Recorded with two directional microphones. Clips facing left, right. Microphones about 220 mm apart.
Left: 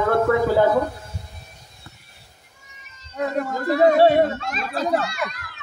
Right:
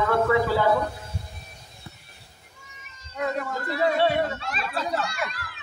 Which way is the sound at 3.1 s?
40° left (ahead or behind).